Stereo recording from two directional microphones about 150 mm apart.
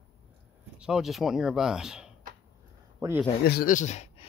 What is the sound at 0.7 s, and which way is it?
Speech, 5° right (ahead or behind).